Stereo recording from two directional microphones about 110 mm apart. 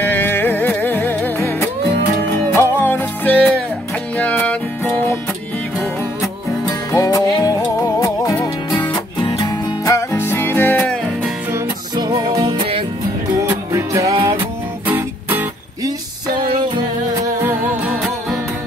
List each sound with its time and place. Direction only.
0.0 s music: 20° left (ahead or behind)
6.9 s music: 30° left (ahead or behind)
9.8 s music: 25° left (ahead or behind)
12.0 s music: 40° right (ahead or behind)
13.4 s music: 25° right (ahead or behind)
14.9 s music: 20° right (ahead or behind)